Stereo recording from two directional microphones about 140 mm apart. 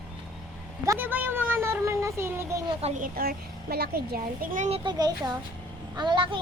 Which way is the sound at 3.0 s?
90° right.